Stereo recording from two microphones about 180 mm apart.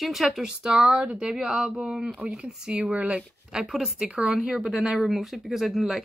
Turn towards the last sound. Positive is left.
turn(degrees=0)  # may be behind; listen again after turning